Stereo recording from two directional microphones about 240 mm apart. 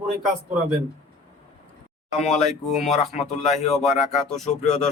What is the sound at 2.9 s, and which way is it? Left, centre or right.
Speech, left.